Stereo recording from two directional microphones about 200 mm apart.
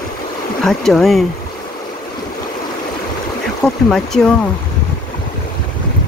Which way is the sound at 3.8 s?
Centre (ahead or behind).